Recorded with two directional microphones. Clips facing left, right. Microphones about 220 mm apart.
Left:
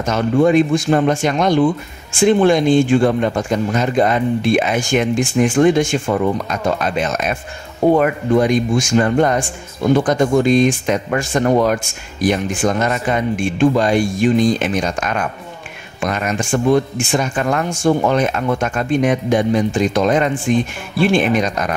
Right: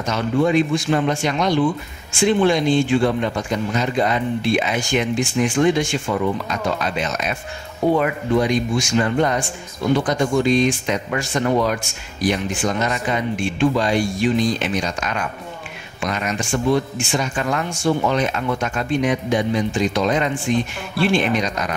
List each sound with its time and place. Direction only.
0.0 s speech: 50° left (ahead or behind)